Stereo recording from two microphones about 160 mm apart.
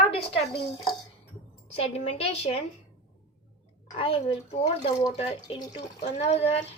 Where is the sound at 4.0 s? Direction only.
35° left (ahead or behind).